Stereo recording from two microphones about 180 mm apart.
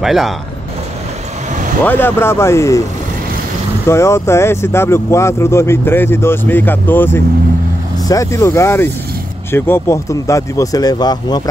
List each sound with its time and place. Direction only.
0.0 s speech: centre (ahead or behind)
1.9 s speech: 10° left (ahead or behind)
3.8 s speech: 15° left (ahead or behind)